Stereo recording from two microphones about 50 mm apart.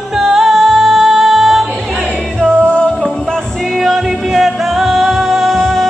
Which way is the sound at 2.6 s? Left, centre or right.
Left.